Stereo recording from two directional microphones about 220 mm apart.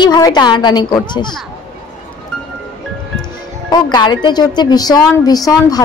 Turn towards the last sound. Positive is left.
turn(degrees=15)  # may be behind; listen again after turning